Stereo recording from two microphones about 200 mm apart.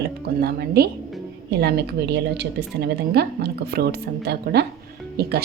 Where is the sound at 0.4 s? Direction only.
50° right (ahead or behind).